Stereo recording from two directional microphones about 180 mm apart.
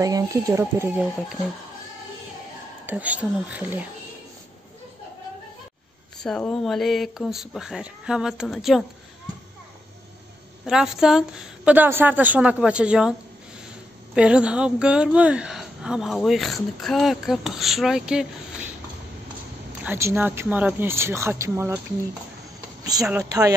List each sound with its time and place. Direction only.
0.0 s speech: 20° right (ahead or behind)
2.9 s speech: 10° right (ahead or behind)
6.2 s speech: 5° left (ahead or behind)
10.6 s speech: 5° right (ahead or behind)
14.1 s speech: 5° right (ahead or behind)
19.8 s speech: 15° right (ahead or behind)
22.9 s speech: 20° right (ahead or behind)